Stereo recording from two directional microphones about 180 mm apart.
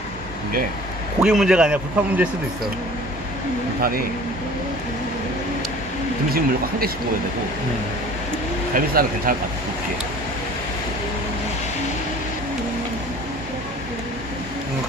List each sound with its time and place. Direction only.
1.2 s a man's voice: 5° right (ahead or behind)
3.8 s speech: 55° right (ahead or behind)
6.3 s speech: 55° right (ahead or behind)
8.7 s speech: 50° right (ahead or behind)